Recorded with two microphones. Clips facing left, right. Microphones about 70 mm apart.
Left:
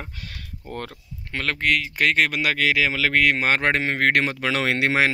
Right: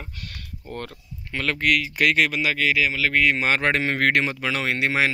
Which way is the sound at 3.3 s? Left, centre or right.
Left.